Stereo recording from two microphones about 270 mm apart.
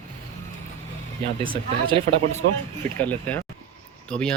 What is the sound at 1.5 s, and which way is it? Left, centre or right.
Speech, centre.